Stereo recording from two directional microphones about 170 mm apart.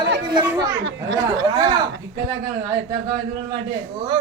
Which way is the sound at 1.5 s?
25° right (ahead or behind).